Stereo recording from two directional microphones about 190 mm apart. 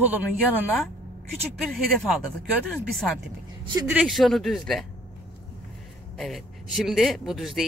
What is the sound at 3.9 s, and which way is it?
Speech, 5° right (ahead or behind).